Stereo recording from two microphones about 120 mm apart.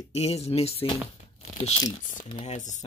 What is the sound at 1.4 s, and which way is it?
Tearing, 75° left (ahead or behind).